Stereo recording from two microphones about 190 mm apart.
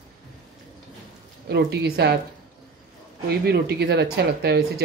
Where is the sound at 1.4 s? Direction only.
60° right (ahead or behind).